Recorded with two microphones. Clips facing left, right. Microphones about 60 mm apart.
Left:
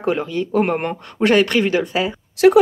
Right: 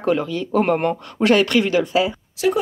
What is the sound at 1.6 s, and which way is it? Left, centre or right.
Speech, centre.